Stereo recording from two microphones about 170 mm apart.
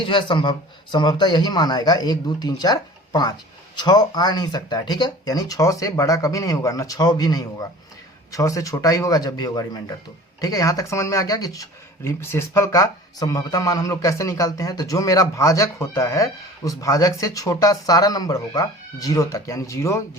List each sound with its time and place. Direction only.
0.0 s speech: 30° left (ahead or behind)